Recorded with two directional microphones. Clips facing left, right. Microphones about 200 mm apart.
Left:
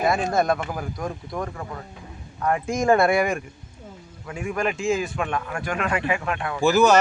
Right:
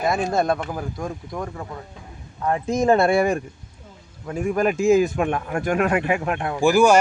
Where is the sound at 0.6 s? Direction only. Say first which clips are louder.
Right 1 dB; 5° left (ahead or behind).